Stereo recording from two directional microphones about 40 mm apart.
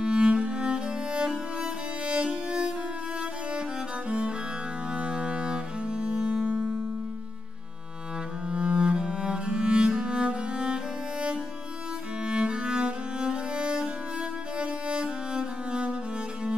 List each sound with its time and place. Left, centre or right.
0.0 s music: right
4.9 s cello: right
6.4 s music: right
8.5 s music: right